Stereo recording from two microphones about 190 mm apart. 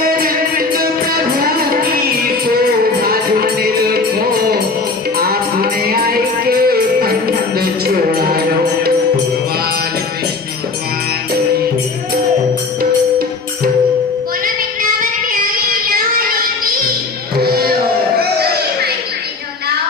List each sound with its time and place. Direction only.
0.2 s music: 50° right (ahead or behind)
15.3 s music: 50° right (ahead or behind)
17.3 s music: 55° right (ahead or behind)